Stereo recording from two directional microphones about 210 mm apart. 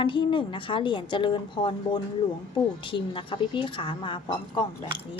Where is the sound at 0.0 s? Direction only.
25° left (ahead or behind).